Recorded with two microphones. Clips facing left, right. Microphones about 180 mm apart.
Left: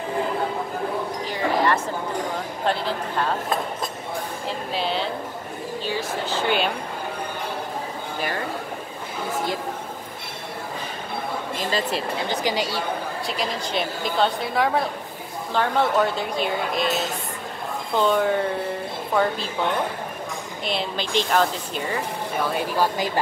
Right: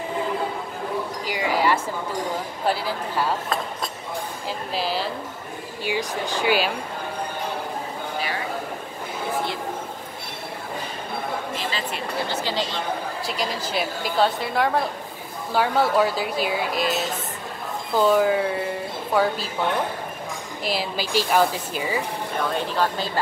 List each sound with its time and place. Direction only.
1.2 s a sound: 10° right (ahead or behind)
2.6 s speech: 5° right (ahead or behind)
4.5 s a woman's voice: centre (ahead or behind)
5.9 s speech: 15° right (ahead or behind)
11.5 s speech: 40° left (ahead or behind)
12.3 s speech: 15° left (ahead or behind)
13.3 s a woman's voice: centre (ahead or behind)
20.6 s a woman's voice: 5° right (ahead or behind)
22.4 s speech: 10° left (ahead or behind)